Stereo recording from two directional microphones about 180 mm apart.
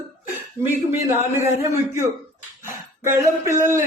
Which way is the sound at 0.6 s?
20° right (ahead or behind).